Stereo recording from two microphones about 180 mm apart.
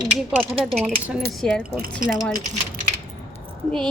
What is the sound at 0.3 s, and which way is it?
A woman's voice, 5° right (ahead or behind).